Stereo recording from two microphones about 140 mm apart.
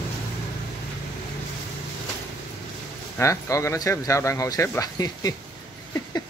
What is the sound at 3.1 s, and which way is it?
Speech, 20° left (ahead or behind).